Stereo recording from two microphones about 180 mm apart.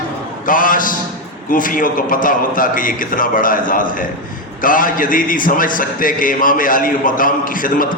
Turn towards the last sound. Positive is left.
turn(degrees=50)  # may be behind; listen again after turning